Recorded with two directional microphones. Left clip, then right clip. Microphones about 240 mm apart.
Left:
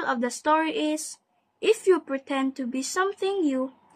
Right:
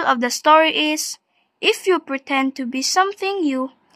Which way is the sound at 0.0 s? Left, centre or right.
Right.